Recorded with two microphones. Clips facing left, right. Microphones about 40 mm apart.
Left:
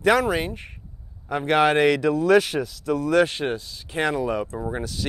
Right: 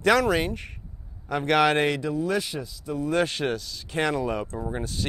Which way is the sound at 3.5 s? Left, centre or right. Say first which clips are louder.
Left 1 dB; left.